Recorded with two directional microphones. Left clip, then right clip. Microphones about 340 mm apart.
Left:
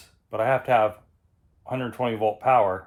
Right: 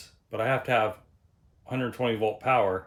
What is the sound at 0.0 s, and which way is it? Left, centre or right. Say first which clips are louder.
Speech: left 4 dB; centre.